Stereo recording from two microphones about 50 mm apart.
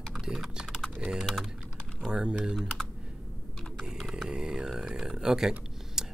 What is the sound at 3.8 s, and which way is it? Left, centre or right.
Mantra, centre.